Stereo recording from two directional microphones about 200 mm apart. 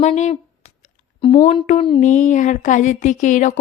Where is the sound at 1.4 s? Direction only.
35° left (ahead or behind).